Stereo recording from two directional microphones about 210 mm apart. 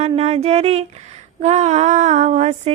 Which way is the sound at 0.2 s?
30° right (ahead or behind).